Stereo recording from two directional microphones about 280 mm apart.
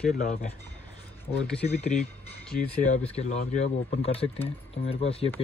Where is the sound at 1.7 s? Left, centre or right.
Left.